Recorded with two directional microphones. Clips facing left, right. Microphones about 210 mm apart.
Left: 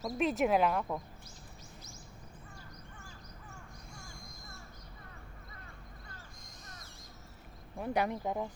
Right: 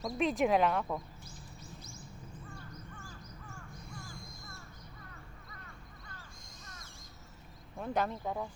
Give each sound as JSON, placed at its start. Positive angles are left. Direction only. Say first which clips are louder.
{"t": 0.0, "sound": "speech", "louder": "even", "side_deg": 0}
{"t": 7.8, "sound": "speech", "louder": "left 1 dB", "side_deg": 15}